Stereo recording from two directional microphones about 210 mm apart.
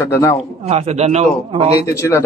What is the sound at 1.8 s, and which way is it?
Speech, 15° left (ahead or behind).